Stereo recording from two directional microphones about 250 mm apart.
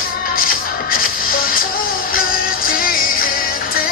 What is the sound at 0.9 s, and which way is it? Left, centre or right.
Music, left.